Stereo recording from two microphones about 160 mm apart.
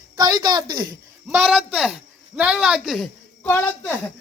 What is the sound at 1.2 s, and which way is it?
Speech, centre (ahead or behind).